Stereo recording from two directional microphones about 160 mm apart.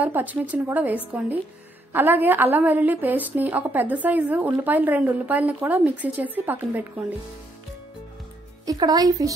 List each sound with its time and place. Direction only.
0.0 s a woman's voice: 10° right (ahead or behind)
8.6 s speech: 25° right (ahead or behind)